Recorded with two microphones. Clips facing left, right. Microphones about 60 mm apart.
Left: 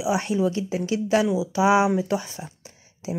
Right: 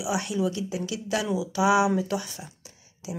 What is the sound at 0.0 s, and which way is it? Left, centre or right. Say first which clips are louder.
Speech: left 4 dB; left.